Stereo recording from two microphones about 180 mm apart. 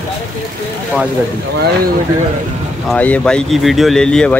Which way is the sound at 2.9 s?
5° left (ahead or behind).